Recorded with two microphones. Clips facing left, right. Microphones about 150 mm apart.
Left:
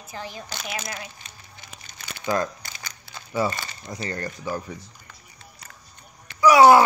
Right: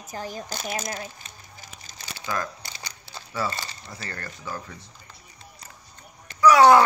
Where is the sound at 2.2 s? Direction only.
25° left (ahead or behind).